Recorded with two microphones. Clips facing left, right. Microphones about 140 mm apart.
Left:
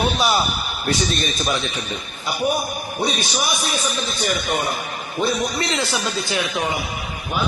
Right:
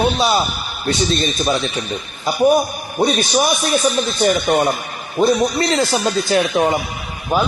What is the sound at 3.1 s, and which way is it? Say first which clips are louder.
Speech: right 8 dB; 50° right (ahead or behind).